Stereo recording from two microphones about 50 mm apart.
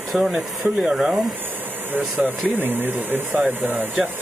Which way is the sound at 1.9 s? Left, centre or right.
Right.